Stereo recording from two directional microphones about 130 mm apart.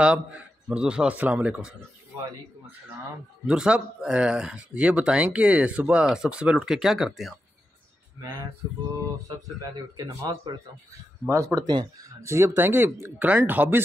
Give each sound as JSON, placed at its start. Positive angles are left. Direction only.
{"t": 0.0, "sound": "speech", "side_deg": -10}
{"t": 3.4, "sound": "speech", "side_deg": -5}
{"t": 9.9, "sound": "speech", "side_deg": -30}
{"t": 11.2, "sound": "speech", "side_deg": -25}